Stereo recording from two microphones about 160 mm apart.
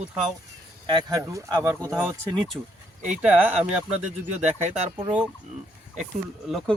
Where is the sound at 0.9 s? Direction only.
20° right (ahead or behind).